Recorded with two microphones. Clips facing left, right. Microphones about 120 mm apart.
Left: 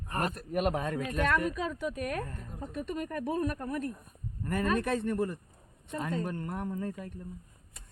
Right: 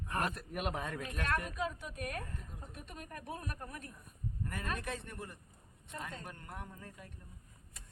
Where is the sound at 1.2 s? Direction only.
90° left.